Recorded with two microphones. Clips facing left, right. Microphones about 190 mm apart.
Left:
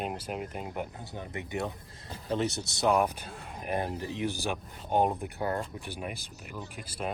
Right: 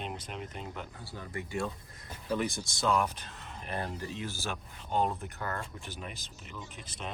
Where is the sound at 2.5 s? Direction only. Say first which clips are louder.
Left 3 dB; 65° left (ahead or behind).